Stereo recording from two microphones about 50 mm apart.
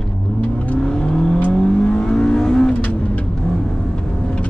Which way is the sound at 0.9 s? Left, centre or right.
Centre.